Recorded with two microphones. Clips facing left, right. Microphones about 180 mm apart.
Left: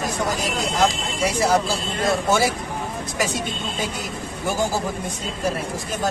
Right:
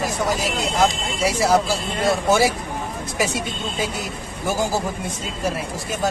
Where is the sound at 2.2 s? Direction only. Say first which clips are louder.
Right 3 dB; 10° right (ahead or behind).